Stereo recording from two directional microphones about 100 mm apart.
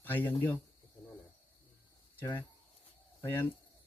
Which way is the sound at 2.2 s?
20° left (ahead or behind).